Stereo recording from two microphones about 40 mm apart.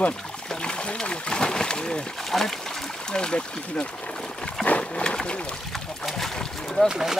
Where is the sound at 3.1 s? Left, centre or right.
Left.